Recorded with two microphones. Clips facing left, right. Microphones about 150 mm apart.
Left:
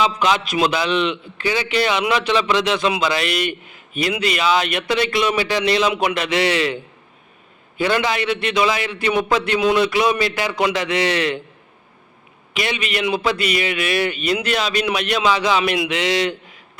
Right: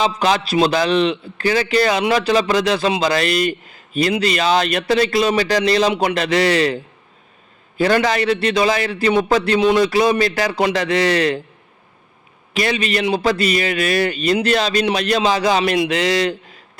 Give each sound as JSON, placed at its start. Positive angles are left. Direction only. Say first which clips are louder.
{"t": 0.2, "sound": "a man's voice", "louder": "right 2 dB", "side_deg": -35}
{"t": 7.8, "sound": "a man's voice", "louder": "right 3 dB", "side_deg": -40}
{"t": 12.5, "sound": "a man's voice", "louder": "right 4 dB", "side_deg": -35}